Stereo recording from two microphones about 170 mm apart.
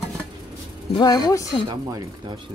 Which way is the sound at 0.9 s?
25° left (ahead or behind).